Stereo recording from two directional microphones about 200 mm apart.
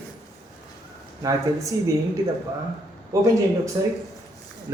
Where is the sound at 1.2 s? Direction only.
20° right (ahead or behind).